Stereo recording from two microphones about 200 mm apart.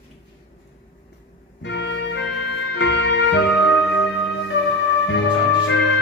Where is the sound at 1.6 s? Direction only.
60° left (ahead or behind).